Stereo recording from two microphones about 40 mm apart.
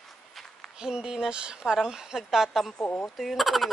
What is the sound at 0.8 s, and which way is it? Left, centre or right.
A woman's voice, centre.